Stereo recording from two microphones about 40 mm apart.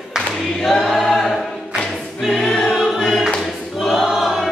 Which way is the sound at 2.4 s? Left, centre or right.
Centre.